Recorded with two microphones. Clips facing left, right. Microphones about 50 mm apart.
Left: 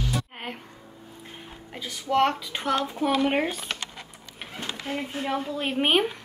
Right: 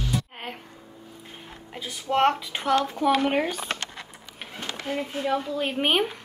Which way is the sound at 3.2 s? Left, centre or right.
Centre.